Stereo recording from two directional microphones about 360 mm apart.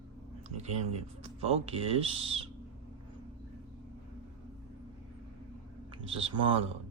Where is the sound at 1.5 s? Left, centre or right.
Centre.